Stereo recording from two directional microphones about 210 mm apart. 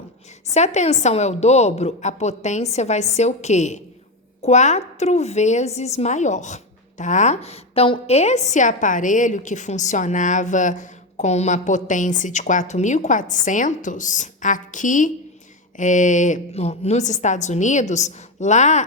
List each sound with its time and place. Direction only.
0.5 s a woman's voice: 35° left (ahead or behind)